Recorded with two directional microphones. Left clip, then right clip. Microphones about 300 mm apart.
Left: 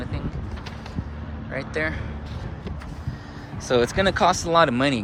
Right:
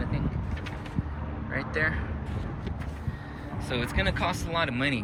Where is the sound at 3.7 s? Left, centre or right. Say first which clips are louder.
Left 10 dB; centre.